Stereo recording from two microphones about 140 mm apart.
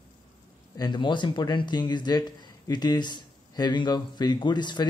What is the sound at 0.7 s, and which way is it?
Speech, 30° left (ahead or behind).